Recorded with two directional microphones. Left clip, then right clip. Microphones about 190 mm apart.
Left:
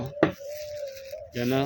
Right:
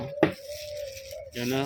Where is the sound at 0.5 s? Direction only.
40° left (ahead or behind).